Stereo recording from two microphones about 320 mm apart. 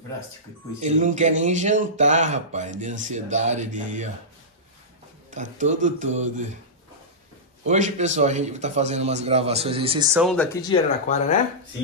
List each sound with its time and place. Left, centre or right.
0.7 s a man's voice: right
5.3 s a man's voice: right
7.6 s a man's voice: right
10.2 s speech: centre
11.1 s speech: left